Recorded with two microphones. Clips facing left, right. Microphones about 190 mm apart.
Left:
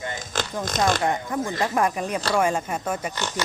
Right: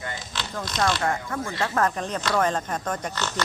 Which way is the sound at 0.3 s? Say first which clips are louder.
Left 8 dB; 45° left (ahead or behind).